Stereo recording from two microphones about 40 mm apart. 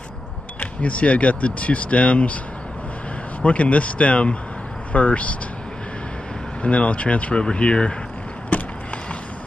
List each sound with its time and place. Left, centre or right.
0.6 s speech: left
3.4 s speech: left
6.6 s speech: left
8.5 s vehicle: left